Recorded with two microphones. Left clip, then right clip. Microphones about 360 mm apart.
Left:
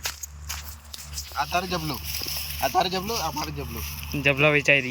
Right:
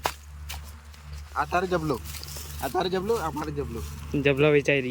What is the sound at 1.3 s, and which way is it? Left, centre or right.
Speech, centre.